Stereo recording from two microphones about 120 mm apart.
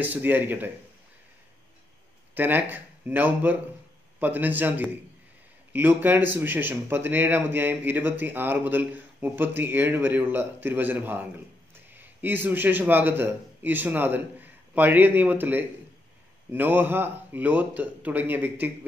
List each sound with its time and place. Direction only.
0.0 s speech: 15° right (ahead or behind)
2.3 s speech: 15° right (ahead or behind)